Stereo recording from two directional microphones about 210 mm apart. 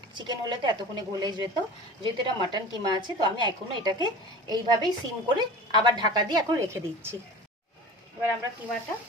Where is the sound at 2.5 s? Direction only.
20° right (ahead or behind).